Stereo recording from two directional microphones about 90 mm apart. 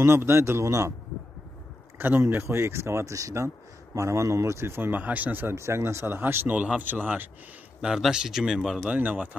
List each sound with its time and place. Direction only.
0.0 s speech: 30° right (ahead or behind)
2.0 s speech: 25° right (ahead or behind)
7.8 s speech: 10° right (ahead or behind)